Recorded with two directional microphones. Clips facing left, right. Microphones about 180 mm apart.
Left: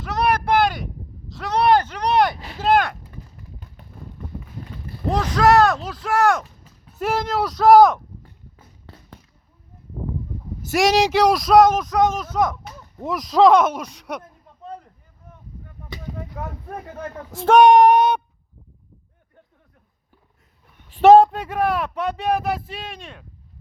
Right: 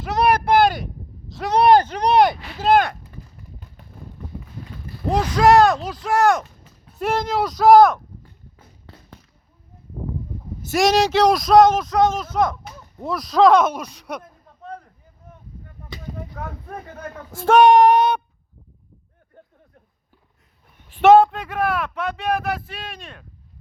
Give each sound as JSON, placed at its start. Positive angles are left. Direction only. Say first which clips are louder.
{"t": 1.4, "sound": "a sound", "louder": "right 3 dB", "side_deg": -15}
{"t": 2.6, "sound": "a sound", "louder": "right 2 dB", "side_deg": 0}
{"t": 5.1, "sound": "speech", "louder": "right 2 dB", "side_deg": 0}
{"t": 10.7, "sound": "speech", "louder": "even", "side_deg": 10}
{"t": 17.0, "sound": "speech", "louder": "left 2 dB", "side_deg": 20}
{"t": 21.0, "sound": "speech", "louder": "left 1 dB", "side_deg": 40}